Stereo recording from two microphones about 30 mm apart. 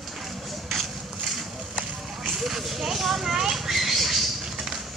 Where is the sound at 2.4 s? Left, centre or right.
Centre.